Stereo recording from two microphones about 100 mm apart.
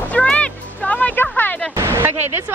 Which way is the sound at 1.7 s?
25° right (ahead or behind).